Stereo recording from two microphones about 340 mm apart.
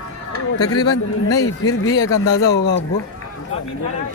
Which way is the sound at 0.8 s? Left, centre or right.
Left.